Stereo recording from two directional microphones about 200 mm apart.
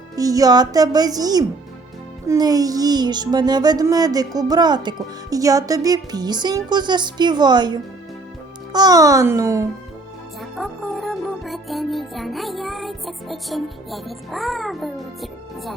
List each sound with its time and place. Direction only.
0.2 s a child's voice: 15° right (ahead or behind)
10.6 s music: centre (ahead or behind)